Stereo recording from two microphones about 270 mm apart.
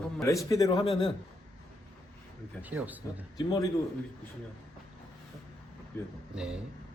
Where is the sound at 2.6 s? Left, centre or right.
Centre.